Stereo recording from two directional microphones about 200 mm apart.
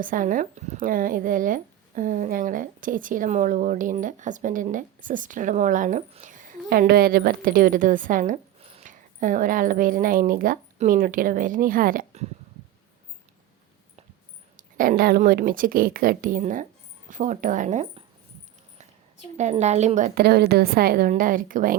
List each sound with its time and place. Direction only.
0.0 s speech: 40° right (ahead or behind)
14.5 s a woman's voice: 45° right (ahead or behind)
19.4 s a woman's voice: 35° right (ahead or behind)